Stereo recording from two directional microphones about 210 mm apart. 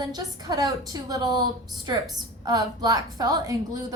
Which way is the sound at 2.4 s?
20° right (ahead or behind).